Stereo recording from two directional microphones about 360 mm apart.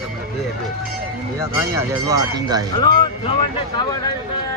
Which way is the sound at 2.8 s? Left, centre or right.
Centre.